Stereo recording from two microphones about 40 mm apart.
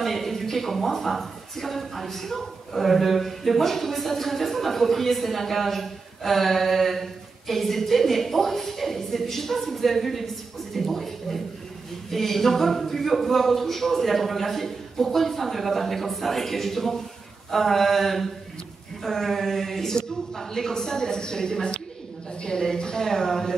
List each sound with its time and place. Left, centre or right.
0.0 s a woman's voice: centre